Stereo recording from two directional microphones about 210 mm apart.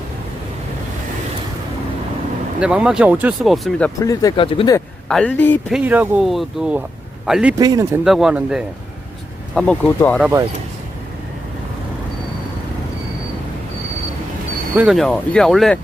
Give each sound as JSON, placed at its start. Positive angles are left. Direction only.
{"t": 2.6, "sound": "speech", "side_deg": -5}
{"t": 4.0, "sound": "speech", "side_deg": 15}
{"t": 5.0, "sound": "speech", "side_deg": 5}
{"t": 5.7, "sound": "speech", "side_deg": -10}
{"t": 7.6, "sound": "speech", "side_deg": -20}
{"t": 8.0, "sound": "speech", "side_deg": 0}
{"t": 9.6, "sound": "speech", "side_deg": 5}
{"t": 10.2, "sound": "speech", "side_deg": -10}
{"t": 14.8, "sound": "speech", "side_deg": 0}